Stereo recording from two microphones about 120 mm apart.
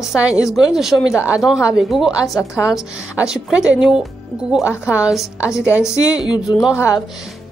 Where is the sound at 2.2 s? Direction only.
25° left (ahead or behind).